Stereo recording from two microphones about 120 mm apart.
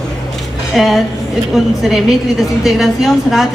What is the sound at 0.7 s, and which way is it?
A woman's voice, centre (ahead or behind).